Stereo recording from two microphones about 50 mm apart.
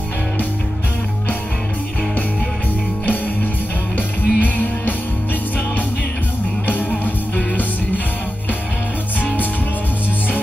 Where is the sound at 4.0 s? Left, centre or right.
Left.